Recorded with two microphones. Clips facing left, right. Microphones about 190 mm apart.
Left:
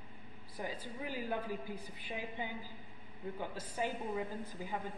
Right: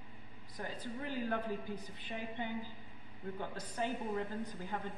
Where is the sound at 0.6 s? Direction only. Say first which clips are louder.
Even; 10° left (ahead or behind).